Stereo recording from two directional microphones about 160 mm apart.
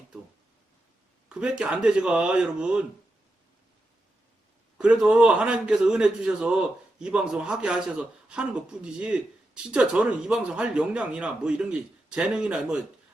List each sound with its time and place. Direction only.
1.3 s a man's voice: 5° right (ahead or behind)
4.8 s a man's voice: centre (ahead or behind)